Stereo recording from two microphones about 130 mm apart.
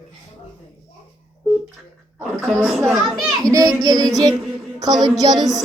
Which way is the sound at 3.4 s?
25° right (ahead or behind).